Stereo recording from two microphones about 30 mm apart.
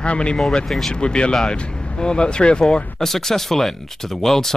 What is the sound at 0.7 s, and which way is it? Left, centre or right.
Speech, centre.